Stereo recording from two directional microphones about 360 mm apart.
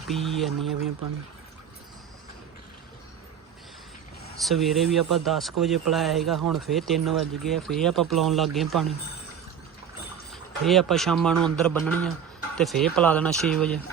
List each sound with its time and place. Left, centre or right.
0.1 s speech: centre
4.4 s speech: centre
10.6 s speech: centre